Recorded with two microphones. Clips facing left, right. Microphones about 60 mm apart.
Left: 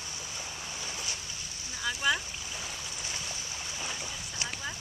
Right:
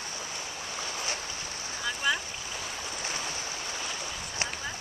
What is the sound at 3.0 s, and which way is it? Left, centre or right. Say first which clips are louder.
Stream: right 5 dB; right.